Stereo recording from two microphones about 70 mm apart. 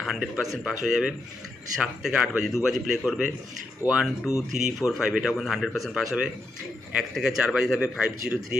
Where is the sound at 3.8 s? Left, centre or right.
Right.